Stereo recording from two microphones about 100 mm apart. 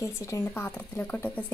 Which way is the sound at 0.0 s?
25° left (ahead or behind).